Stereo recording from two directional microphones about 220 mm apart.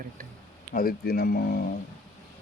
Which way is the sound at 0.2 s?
40° right (ahead or behind).